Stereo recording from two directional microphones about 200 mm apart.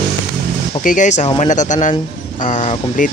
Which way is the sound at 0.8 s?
40° left (ahead or behind).